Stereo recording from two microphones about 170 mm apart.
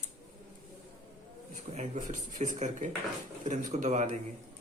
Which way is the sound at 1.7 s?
45° right (ahead or behind).